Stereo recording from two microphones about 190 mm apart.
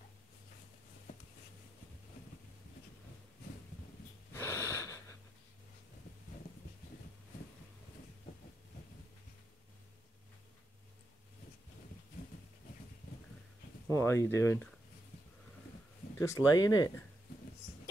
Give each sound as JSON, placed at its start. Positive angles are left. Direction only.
{"t": 4.3, "sound": "wheeze", "side_deg": 15}
{"t": 13.9, "sound": "speech", "side_deg": 15}
{"t": 16.2, "sound": "speech", "side_deg": 15}